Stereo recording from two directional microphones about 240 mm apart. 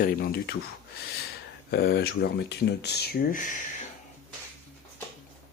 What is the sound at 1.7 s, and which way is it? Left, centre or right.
Speech, left.